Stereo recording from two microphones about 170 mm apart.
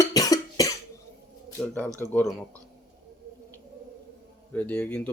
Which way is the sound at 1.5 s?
5° left (ahead or behind).